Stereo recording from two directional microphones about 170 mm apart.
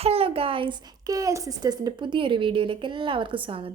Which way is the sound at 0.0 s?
35° right (ahead or behind).